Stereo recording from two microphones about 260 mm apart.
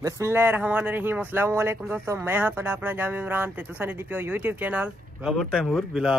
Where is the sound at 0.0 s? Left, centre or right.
Centre.